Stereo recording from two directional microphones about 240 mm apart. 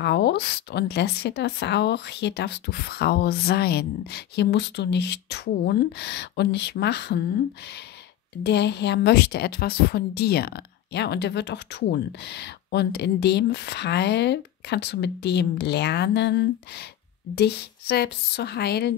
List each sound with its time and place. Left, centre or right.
0.0 s a woman's voice: left
8.5 s a woman's voice: left